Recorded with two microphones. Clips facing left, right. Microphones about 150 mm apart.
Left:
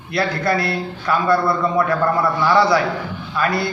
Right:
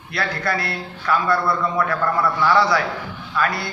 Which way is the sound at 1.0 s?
25° left (ahead or behind).